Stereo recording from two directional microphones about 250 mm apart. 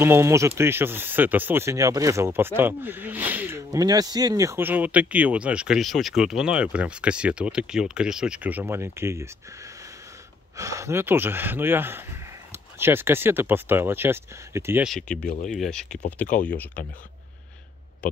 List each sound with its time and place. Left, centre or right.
0.0 s speech: centre
10.6 s speech: centre
15.2 s speech: left
15.5 s speech: centre